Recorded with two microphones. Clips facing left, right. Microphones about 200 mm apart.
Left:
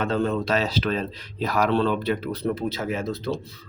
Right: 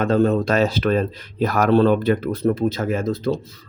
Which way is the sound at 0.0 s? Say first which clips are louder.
Right 6 dB; 45° right (ahead or behind).